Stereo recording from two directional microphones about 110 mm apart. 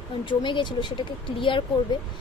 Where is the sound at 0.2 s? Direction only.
45° left (ahead or behind).